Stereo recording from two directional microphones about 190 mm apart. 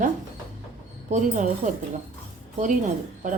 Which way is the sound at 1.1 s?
40° right (ahead or behind).